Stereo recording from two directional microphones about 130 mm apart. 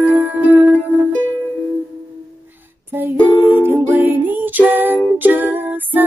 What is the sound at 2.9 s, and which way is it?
Music, 15° right (ahead or behind).